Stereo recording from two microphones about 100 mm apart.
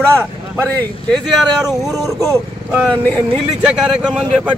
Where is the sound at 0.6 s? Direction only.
15° left (ahead or behind).